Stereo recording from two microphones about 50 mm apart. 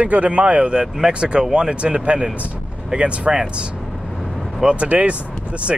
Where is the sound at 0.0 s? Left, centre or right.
Right.